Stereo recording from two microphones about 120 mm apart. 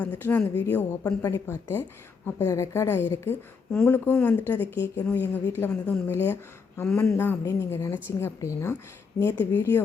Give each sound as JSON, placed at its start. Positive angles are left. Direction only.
{"t": 0.0, "sound": "speech", "side_deg": 15}